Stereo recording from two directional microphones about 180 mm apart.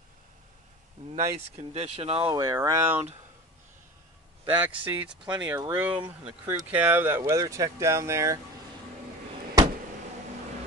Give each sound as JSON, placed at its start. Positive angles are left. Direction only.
{"t": 1.1, "sound": "speech", "side_deg": -40}
{"t": 4.5, "sound": "speech", "side_deg": -10}